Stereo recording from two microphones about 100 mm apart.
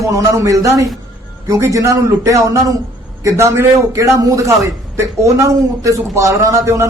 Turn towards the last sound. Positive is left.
turn(degrees=-30)  # may be behind; listen again after turning